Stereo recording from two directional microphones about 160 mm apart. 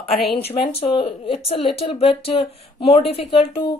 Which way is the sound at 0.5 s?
40° left (ahead or behind).